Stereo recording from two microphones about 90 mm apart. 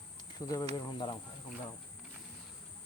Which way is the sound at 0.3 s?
45° left (ahead or behind).